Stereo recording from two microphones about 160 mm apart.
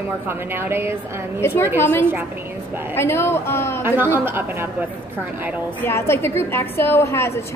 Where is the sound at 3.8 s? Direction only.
15° right (ahead or behind).